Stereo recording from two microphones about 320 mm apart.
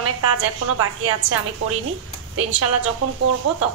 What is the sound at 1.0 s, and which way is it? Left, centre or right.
A woman's voice, right.